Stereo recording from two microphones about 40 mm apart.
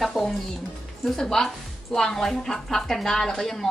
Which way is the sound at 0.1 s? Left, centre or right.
Centre.